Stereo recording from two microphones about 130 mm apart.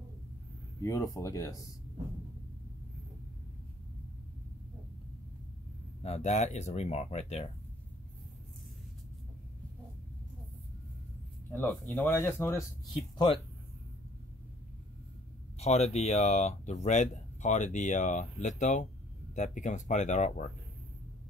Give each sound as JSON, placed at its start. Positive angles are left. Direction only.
{"t": 0.7, "sound": "speech", "side_deg": 25}
{"t": 6.0, "sound": "speech", "side_deg": 60}
{"t": 11.5, "sound": "speech", "side_deg": 15}
{"t": 15.6, "sound": "speech", "side_deg": 55}